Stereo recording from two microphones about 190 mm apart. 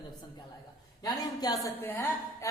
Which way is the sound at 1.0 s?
20° left (ahead or behind).